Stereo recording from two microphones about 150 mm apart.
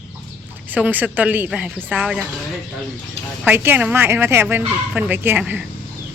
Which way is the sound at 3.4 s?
15° right (ahead or behind).